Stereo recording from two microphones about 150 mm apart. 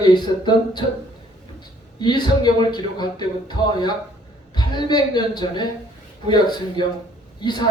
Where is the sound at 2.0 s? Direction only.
30° left (ahead or behind).